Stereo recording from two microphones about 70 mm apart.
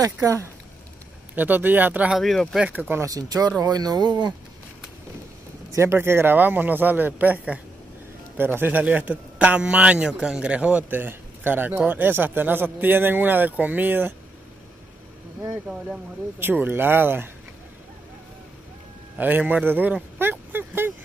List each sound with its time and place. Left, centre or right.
0.0 s speech: right
1.3 s speech: right
2.1 s speech: centre
2.7 s speech: right
3.1 s speech: right
5.7 s speech: right
16.3 s speech: right
19.1 s speech: right